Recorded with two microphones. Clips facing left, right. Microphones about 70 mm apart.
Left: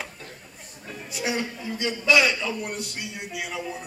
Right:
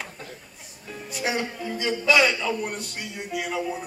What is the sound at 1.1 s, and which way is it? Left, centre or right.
A man's voice, centre.